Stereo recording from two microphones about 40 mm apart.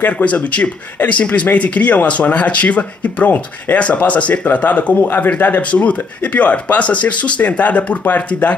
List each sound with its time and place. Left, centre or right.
0.2 s speech: left
5.0 s speech: left
5.7 s speech: left